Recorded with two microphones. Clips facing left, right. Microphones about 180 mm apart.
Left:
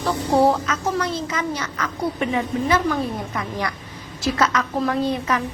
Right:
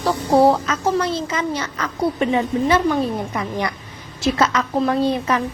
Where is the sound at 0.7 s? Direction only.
30° right (ahead or behind).